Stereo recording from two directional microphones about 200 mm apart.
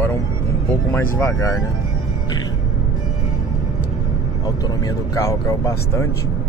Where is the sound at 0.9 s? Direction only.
15° left (ahead or behind).